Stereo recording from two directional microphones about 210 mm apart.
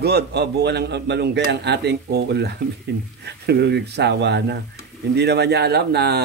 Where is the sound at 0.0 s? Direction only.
50° right (ahead or behind).